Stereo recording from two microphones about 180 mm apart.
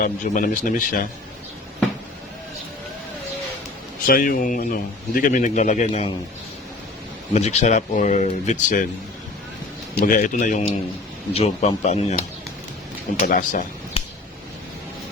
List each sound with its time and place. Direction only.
0.0 s a man's voice: 50° left (ahead or behind)
4.0 s a man's voice: 50° left (ahead or behind)
7.3 s speech: 40° left (ahead or behind)
10.2 s a man's voice: 45° left (ahead or behind)
14.0 s a sound: 35° left (ahead or behind)